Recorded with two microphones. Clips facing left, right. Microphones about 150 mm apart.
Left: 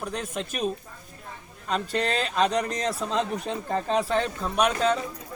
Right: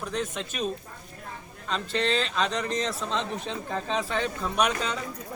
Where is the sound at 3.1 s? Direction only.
10° left (ahead or behind).